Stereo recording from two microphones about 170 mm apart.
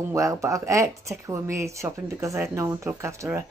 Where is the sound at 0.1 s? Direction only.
20° right (ahead or behind).